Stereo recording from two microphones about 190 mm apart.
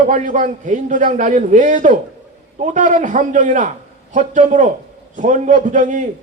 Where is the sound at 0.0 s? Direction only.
40° right (ahead or behind).